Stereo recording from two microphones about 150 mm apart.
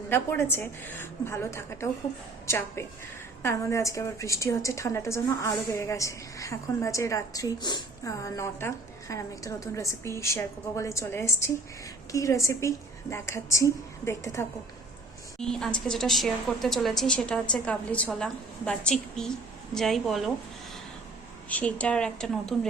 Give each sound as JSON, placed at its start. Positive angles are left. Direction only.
{"t": 0.1, "sound": "a woman's voice", "side_deg": 15}
{"t": 15.4, "sound": "a woman's voice", "side_deg": 5}
{"t": 21.5, "sound": "a woman's voice", "side_deg": 10}